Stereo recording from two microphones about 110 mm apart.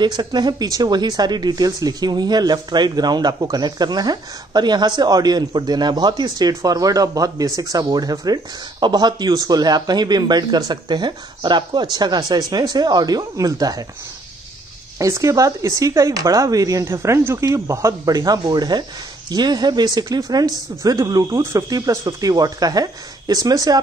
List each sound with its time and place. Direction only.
0.0 s speech: 40° right (ahead or behind)
15.0 s speech: 30° right (ahead or behind)